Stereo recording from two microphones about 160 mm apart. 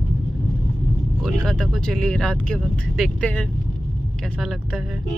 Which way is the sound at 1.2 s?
5° left (ahead or behind).